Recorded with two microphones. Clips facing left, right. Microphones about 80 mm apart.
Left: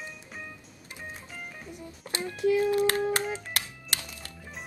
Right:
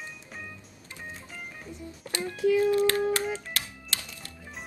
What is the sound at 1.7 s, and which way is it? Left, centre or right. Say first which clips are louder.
Music: right 2 dB; centre.